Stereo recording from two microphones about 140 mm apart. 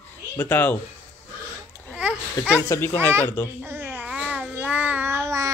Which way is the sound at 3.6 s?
15° right (ahead or behind).